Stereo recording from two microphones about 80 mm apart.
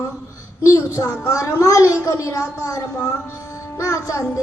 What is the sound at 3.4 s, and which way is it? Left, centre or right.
Music, left.